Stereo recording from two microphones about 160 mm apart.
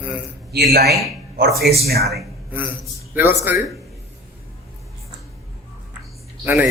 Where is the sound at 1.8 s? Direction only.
75° right (ahead or behind).